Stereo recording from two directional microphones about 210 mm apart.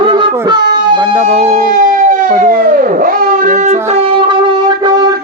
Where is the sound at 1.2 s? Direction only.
30° right (ahead or behind).